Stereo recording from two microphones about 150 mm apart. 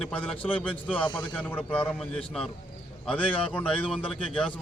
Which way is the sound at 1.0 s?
30° left (ahead or behind).